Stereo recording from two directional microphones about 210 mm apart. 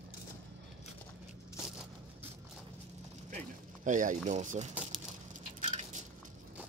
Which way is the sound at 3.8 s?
35° right (ahead or behind).